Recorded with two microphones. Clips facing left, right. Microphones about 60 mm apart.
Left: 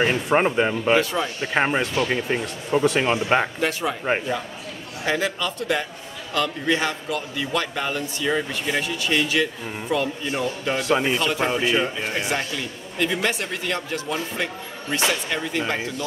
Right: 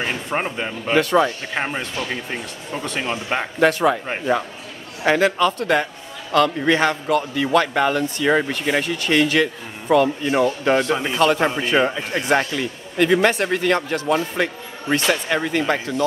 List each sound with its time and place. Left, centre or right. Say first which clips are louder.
0.1 s speech: left 4 dB; centre
0.9 s speech: right 10 dB; right
1.4 s speech: left 4 dB; centre
3.6 s speech: right 8 dB; right
5.0 s speech: right 7 dB; right
8.8 s a man's voice: right 4 dB; right